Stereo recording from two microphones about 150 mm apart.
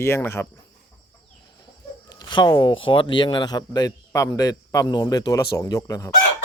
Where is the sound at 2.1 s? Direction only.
30° left (ahead or behind).